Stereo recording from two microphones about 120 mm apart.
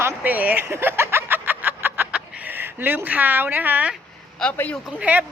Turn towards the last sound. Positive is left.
turn(degrees=-10)  # may be behind; listen again after turning